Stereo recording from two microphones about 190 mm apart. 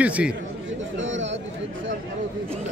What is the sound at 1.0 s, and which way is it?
Chatter, 80° right.